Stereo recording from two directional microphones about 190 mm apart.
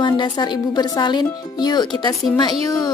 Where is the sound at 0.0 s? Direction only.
25° left (ahead or behind).